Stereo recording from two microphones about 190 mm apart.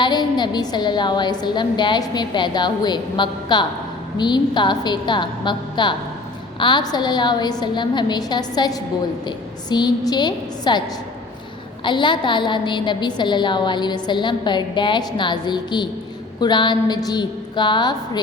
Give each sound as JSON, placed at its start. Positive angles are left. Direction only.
{"t": 0.0, "sound": "a woman's voice", "side_deg": 25}